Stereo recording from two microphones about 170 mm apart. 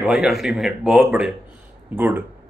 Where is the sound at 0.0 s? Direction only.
Centre (ahead or behind).